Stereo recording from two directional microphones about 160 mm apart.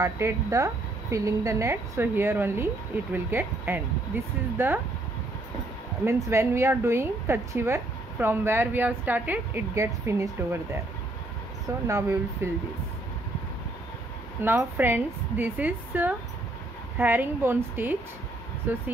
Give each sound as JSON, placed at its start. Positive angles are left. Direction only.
{"t": 0.0, "sound": "a woman's voice", "side_deg": -20}
{"t": 6.0, "sound": "a woman's voice", "side_deg": -15}
{"t": 11.9, "sound": "speech", "side_deg": -20}
{"t": 14.4, "sound": "a woman's voice", "side_deg": -15}